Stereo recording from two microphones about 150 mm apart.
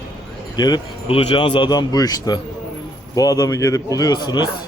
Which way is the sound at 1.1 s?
40° left (ahead or behind).